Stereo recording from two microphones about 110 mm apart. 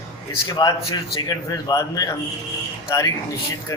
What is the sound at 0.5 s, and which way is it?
Speech, 35° left (ahead or behind).